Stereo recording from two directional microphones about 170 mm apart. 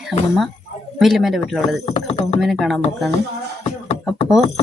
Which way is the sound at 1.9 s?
35° left (ahead or behind).